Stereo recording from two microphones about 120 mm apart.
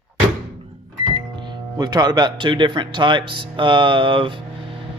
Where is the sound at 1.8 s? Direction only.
35° right (ahead or behind).